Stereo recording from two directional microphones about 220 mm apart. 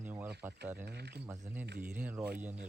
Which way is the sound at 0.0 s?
10° right (ahead or behind).